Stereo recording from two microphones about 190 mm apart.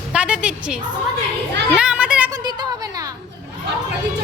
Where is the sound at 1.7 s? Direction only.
5° right (ahead or behind).